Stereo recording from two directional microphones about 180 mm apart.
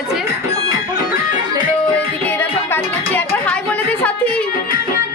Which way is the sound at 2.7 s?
10° left (ahead or behind).